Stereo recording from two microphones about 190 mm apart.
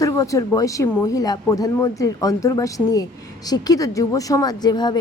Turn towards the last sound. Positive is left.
turn(degrees=20)  # may be behind; listen again after turning